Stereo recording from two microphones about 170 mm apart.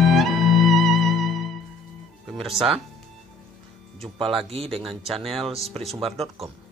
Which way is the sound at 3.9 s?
35° right (ahead or behind).